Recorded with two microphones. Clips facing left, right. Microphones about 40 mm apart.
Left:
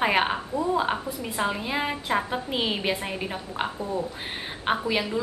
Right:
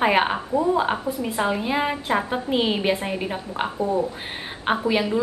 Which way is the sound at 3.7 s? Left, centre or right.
Right.